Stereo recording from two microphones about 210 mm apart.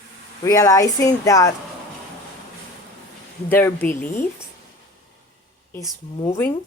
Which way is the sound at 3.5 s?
10° left (ahead or behind).